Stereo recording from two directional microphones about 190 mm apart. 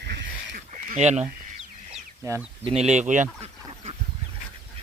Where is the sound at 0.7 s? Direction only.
40° right (ahead or behind).